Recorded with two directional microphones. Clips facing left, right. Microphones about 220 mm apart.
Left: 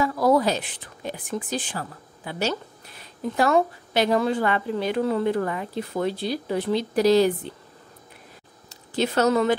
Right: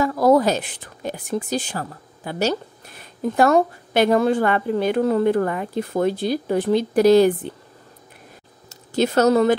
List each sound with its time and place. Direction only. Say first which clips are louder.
0.0 s a woman's voice: right 4 dB; 45° right (ahead or behind)
8.6 s speech: right 5 dB; 45° right (ahead or behind)